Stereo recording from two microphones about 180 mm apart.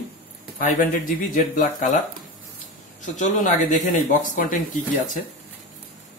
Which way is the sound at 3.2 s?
45° left (ahead or behind).